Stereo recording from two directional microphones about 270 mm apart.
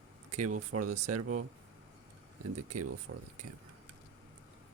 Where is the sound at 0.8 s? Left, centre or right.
Right.